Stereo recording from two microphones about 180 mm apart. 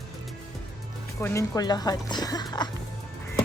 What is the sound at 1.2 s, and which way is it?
Speech, 20° left (ahead or behind).